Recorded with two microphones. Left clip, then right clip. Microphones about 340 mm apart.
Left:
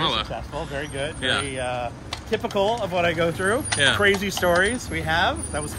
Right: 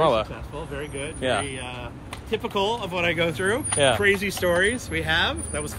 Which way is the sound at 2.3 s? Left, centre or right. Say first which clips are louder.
Left 2 dB; centre.